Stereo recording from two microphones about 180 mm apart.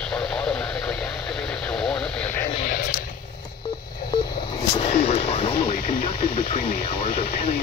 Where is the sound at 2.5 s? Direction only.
45° left (ahead or behind).